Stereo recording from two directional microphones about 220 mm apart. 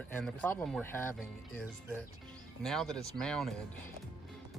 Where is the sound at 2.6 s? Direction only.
Centre (ahead or behind).